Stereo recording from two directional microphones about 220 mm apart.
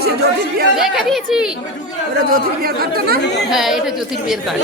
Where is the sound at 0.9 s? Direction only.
Centre (ahead or behind).